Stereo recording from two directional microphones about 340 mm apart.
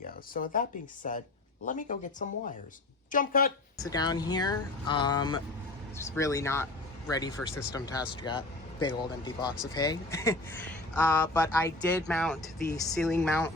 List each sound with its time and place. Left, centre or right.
0.3 s speech: left
3.8 s speech: centre
11.6 s speech: centre